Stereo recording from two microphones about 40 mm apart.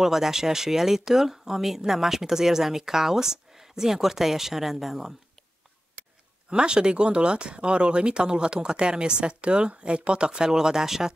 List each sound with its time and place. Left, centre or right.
0.0 s speech: centre
6.5 s speech: right